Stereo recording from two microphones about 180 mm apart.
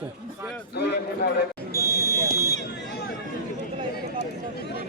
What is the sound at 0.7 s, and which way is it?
Speech, 65° left (ahead or behind).